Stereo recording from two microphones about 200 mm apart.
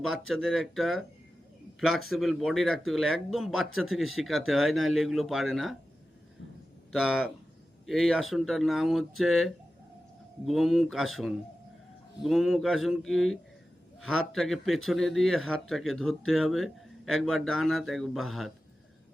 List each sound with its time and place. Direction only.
0.3 s speech: centre (ahead or behind)
2.0 s speech: centre (ahead or behind)
6.9 s speech: centre (ahead or behind)